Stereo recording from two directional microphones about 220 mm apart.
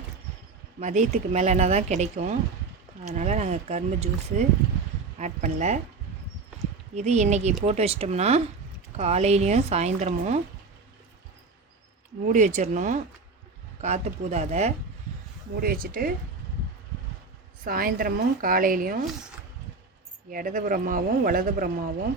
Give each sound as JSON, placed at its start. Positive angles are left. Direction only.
{"t": 0.8, "sound": "speech", "side_deg": -30}
{"t": 6.9, "sound": "a woman's voice", "side_deg": -30}
{"t": 12.2, "sound": "speech", "side_deg": -35}
{"t": 15.6, "sound": "speech", "side_deg": -40}
{"t": 17.6, "sound": "speech", "side_deg": -40}
{"t": 20.3, "sound": "speech", "side_deg": -40}